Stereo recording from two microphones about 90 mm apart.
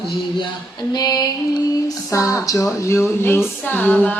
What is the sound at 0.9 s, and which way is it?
Music, 45° left (ahead or behind).